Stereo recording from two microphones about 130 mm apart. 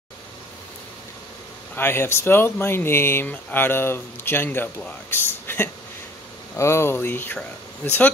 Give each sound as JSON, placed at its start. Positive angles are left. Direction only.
{"t": 1.8, "sound": "speech", "side_deg": 20}